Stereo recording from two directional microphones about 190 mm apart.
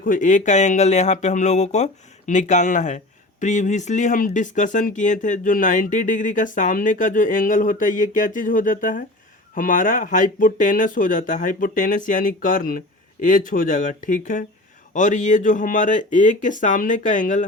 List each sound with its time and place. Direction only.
0.0 s speech: 45° left (ahead or behind)